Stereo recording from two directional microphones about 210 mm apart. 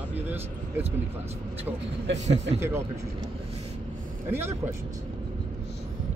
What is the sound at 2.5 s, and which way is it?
Speech, 60° right (ahead or behind).